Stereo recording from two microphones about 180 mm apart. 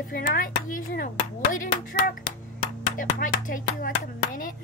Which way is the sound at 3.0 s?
50° left (ahead or behind).